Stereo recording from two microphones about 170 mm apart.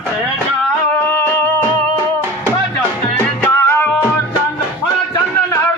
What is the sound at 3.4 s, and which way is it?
Music, 15° left (ahead or behind).